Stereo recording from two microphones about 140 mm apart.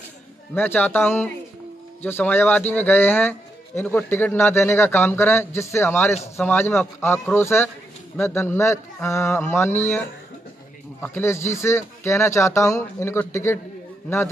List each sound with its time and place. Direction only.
0.6 s a man's voice: 15° left (ahead or behind)
11.0 s speech: 15° left (ahead or behind)